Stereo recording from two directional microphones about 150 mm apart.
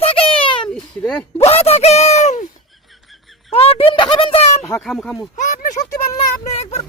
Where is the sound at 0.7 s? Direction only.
5° left (ahead or behind).